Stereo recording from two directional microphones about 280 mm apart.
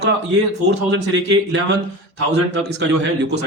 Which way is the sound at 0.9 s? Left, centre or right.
Right.